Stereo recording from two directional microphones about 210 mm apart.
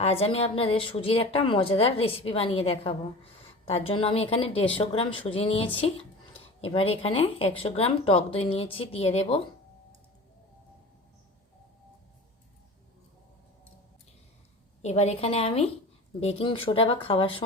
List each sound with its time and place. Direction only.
0.0 s a woman's voice: 25° left (ahead or behind)
14.8 s a woman's voice: 30° left (ahead or behind)